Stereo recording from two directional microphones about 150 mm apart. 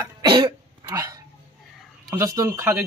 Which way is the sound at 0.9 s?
20° right (ahead or behind).